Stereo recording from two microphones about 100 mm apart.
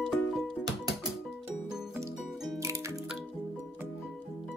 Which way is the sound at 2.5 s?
30° right (ahead or behind).